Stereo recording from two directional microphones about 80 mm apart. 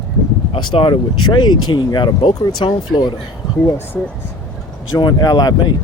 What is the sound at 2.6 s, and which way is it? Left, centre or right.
Speech, left.